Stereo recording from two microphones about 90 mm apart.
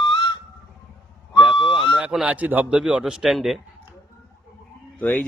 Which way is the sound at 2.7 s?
10° right (ahead or behind).